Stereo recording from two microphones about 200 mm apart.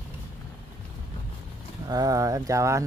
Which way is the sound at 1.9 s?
20° right (ahead or behind).